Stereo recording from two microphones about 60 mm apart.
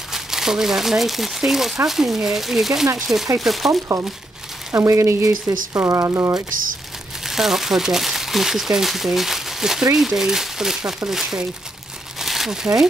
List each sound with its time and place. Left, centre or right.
0.1 s speech: centre
4.7 s speech: right
7.2 s speech: centre
12.2 s crumpling: centre